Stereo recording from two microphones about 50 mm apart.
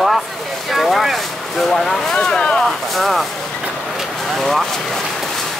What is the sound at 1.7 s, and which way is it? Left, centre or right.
Speech, centre.